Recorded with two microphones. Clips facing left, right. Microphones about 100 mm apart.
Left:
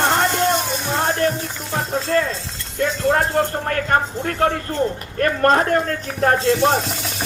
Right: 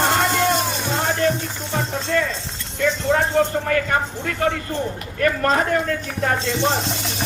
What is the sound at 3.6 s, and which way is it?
Speech, 50° left (ahead or behind).